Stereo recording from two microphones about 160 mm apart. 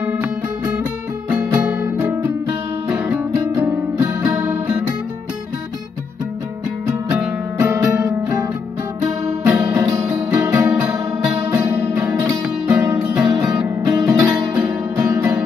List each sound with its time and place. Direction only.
1.6 s music: 5° right (ahead or behind)
7.1 s music: 15° right (ahead or behind)
9.8 s music: 20° right (ahead or behind)